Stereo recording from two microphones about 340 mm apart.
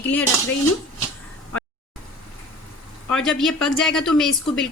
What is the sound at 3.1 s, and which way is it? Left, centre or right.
A woman's voice, centre.